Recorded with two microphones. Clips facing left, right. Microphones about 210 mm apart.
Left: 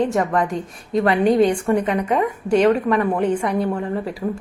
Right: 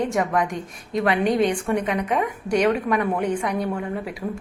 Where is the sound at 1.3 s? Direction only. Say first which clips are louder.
Left 6 dB; 35° left (ahead or behind).